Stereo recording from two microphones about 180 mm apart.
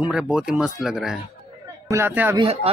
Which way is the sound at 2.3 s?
30° right (ahead or behind).